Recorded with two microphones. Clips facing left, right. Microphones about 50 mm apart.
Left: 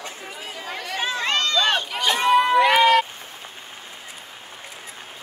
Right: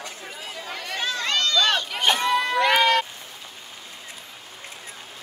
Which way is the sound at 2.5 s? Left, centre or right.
Centre.